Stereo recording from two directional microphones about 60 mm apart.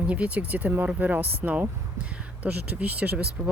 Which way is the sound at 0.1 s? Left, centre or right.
Right.